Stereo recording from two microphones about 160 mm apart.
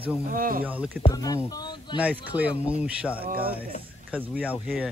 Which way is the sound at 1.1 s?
25° left (ahead or behind).